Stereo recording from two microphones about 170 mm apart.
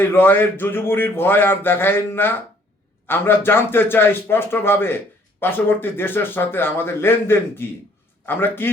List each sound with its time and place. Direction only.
0.0 s speech: 10° left (ahead or behind)